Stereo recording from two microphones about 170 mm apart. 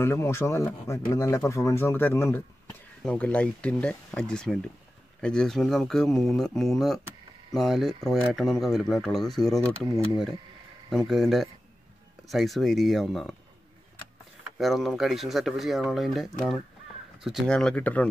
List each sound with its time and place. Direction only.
0.0 s speech: 15° left (ahead or behind)
10.9 s speech: centre (ahead or behind)
14.4 s speech: centre (ahead or behind)